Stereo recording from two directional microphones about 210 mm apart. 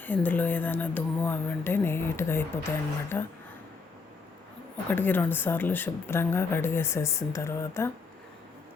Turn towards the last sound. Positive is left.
turn(degrees=10)  # may be behind; listen again after turning